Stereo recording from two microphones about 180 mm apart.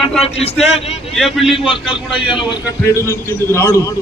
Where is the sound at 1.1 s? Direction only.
Centre (ahead or behind).